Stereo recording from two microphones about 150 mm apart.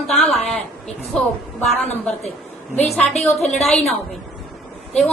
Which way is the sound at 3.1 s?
45° left (ahead or behind).